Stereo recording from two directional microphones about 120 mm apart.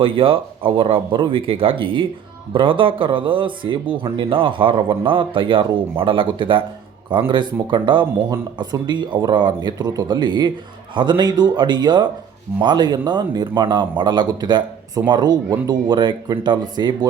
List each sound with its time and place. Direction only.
0.0 s a man's voice: 50° right (ahead or behind)